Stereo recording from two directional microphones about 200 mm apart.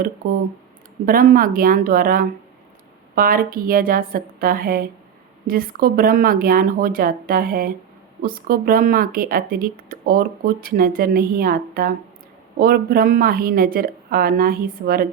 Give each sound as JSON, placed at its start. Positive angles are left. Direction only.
{"t": 0.2, "sound": "speech", "side_deg": -45}